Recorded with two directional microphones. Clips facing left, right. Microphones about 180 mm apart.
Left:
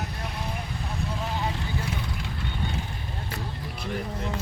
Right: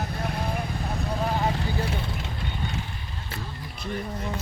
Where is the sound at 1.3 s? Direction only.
45° right (ahead or behind).